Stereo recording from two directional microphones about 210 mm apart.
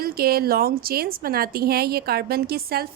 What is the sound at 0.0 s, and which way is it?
A woman's voice, 45° right (ahead or behind).